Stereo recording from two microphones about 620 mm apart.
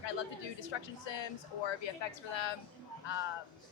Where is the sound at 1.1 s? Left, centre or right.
Left.